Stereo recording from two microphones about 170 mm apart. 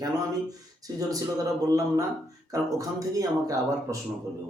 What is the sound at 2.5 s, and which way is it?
Speech, 20° right (ahead or behind).